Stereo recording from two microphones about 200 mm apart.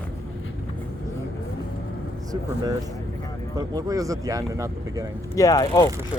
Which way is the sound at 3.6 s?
20° right (ahead or behind).